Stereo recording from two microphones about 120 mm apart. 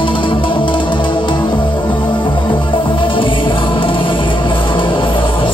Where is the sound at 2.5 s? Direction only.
45° left (ahead or behind).